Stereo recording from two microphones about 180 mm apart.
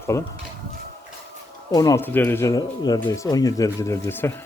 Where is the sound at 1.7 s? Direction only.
20° left (ahead or behind).